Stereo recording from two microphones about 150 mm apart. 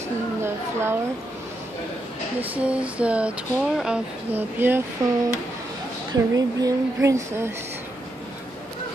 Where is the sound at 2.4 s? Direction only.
10° right (ahead or behind).